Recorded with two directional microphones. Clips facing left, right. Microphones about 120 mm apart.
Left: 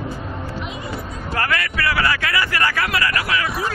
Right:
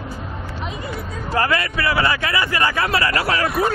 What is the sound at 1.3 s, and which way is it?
Speech, 25° right (ahead or behind).